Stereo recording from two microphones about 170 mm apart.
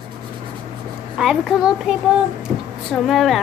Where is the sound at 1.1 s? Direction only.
5° right (ahead or behind).